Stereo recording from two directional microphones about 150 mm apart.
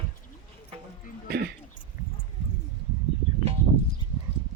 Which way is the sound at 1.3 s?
90° right.